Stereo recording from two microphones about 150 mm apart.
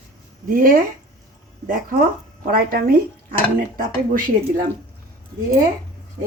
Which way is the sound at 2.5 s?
80° right.